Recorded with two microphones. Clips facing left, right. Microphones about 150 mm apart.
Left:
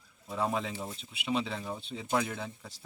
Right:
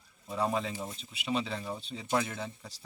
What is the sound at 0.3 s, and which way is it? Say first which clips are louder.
Speech: right 1 dB; 5° left (ahead or behind).